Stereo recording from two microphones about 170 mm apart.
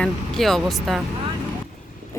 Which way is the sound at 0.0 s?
Centre (ahead or behind).